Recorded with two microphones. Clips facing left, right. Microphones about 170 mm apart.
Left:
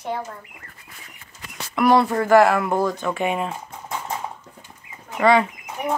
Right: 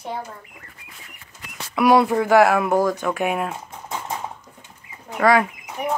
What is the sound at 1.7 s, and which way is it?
Speech, 10° right (ahead or behind).